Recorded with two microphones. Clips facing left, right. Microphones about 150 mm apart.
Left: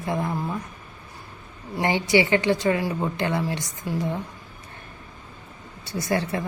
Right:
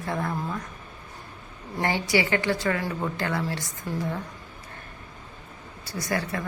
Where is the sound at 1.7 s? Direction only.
20° left (ahead or behind).